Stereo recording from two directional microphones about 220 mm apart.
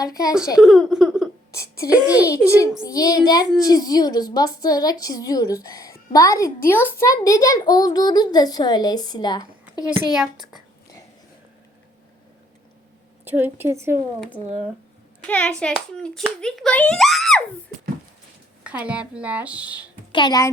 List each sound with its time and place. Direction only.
0.0 s a child's voice: 15° left (ahead or behind)
0.6 s a child's voice: centre (ahead or behind)
2.2 s a child's voice: 15° left (ahead or behind)
10.1 s a child's voice: centre (ahead or behind)
13.2 s speech: 10° right (ahead or behind)
15.3 s a child's voice: 5° left (ahead or behind)
18.6 s speech: 5° right (ahead or behind)
20.1 s a child's voice: 15° left (ahead or behind)